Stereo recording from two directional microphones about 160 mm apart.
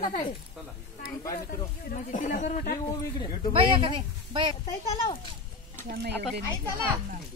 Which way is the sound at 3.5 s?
30° right (ahead or behind).